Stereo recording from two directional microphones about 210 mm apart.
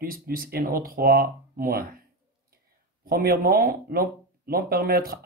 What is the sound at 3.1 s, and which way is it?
Speech, 45° right (ahead or behind).